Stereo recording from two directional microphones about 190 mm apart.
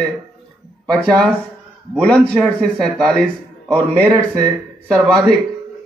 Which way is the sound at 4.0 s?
20° right (ahead or behind).